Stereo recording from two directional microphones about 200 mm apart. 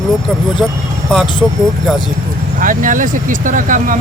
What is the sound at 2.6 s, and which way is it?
Speech, 40° right (ahead or behind).